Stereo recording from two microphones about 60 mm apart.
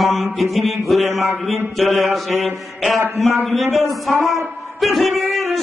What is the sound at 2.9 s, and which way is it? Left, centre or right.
Speech, right.